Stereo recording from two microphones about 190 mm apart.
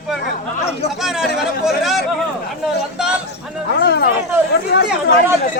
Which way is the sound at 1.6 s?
Centre (ahead or behind).